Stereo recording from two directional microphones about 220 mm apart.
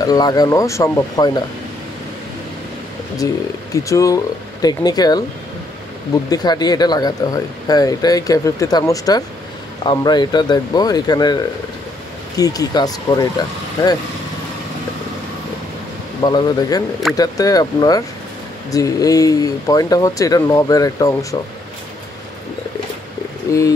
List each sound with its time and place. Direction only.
0.0 s speech: 15° left (ahead or behind)
3.2 s speech: 15° left (ahead or behind)
6.3 s speech: 20° left (ahead or behind)
16.2 s speech: 20° left (ahead or behind)
23.5 s speech: 15° left (ahead or behind)